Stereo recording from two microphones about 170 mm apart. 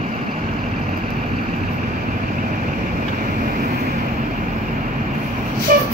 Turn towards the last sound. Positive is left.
turn(degrees=-60)  # may be behind; listen again after turning